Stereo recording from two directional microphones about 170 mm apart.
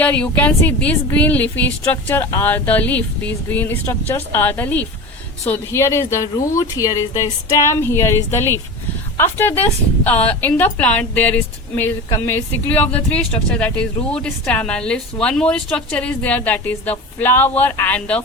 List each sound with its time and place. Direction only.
0.0 s speech: 10° left (ahead or behind)